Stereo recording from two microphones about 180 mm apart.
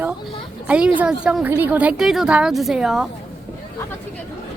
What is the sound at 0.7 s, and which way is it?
A woman's voice, 5° right (ahead or behind).